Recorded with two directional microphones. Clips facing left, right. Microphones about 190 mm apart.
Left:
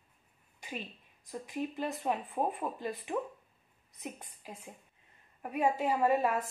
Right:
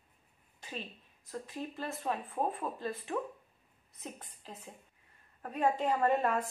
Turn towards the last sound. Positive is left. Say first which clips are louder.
# left 1 dB
turn(degrees=5)  # may be behind; listen again after turning